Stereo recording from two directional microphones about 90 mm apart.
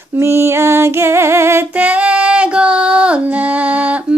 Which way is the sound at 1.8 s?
15° right (ahead or behind).